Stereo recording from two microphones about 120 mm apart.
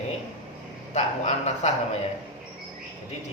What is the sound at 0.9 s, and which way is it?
Speech, 70° left (ahead or behind).